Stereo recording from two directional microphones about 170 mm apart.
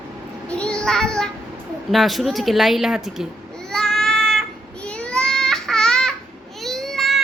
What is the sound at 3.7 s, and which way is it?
Child singing, 5° left (ahead or behind).